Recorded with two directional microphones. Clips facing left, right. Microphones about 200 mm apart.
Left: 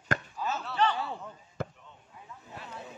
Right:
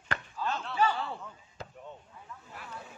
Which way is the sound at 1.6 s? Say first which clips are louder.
Left 9 dB; 55° left (ahead or behind).